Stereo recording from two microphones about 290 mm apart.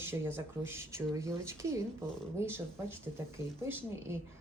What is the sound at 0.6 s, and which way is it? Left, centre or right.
Speech, centre.